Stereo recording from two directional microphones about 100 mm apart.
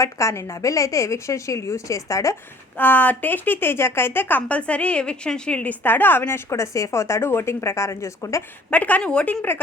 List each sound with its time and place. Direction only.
0.0 s a woman's voice: 30° left (ahead or behind)
2.7 s a woman's voice: 15° left (ahead or behind)
8.7 s a woman's voice: 15° left (ahead or behind)